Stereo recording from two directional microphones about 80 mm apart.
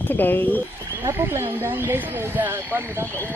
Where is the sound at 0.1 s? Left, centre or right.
Left.